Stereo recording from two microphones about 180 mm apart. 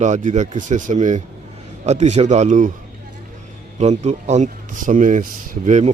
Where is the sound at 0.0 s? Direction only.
40° right (ahead or behind).